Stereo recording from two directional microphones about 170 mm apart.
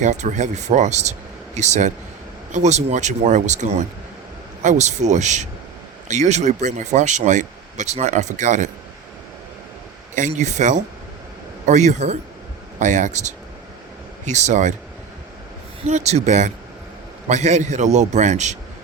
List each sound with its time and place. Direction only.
0.0 s speech: 45° right (ahead or behind)
10.2 s speech: 45° right (ahead or behind)
15.9 s speech: 40° right (ahead or behind)